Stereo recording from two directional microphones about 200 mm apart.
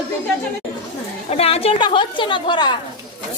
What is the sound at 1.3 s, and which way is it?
A woman's voice, 30° left (ahead or behind).